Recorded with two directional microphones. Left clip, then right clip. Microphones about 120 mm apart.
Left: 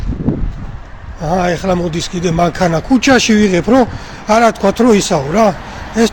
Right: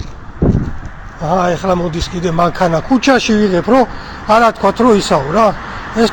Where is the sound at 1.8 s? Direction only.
45° left (ahead or behind).